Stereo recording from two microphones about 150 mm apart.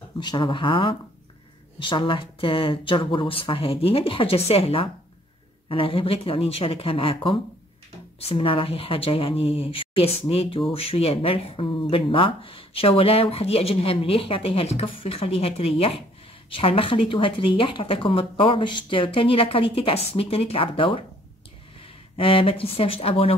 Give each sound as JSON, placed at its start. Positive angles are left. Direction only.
{"t": 0.2, "sound": "speech", "side_deg": 30}